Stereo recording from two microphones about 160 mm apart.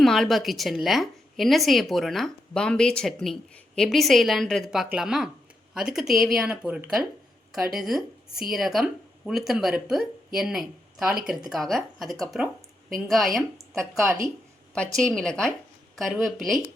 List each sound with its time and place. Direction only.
0.0 s a woman's voice: centre (ahead or behind)
14.9 s a woman's voice: 5° left (ahead or behind)